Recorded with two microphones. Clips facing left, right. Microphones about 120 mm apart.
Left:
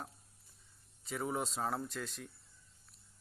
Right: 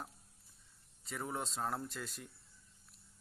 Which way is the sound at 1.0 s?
5° left (ahead or behind).